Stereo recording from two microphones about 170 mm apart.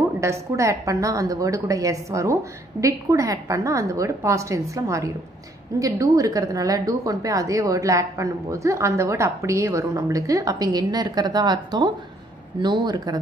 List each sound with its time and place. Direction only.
0.2 s a woman's voice: 15° right (ahead or behind)